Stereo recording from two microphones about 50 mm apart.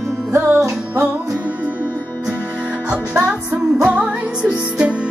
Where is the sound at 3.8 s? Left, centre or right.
Right.